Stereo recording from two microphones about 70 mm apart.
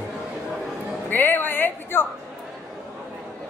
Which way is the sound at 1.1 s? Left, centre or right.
Left.